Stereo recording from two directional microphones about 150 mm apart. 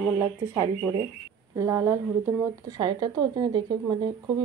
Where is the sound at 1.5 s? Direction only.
20° right (ahead or behind).